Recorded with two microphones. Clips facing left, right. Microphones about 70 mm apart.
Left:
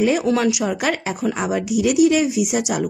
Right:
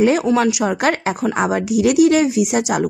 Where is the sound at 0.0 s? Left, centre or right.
Right.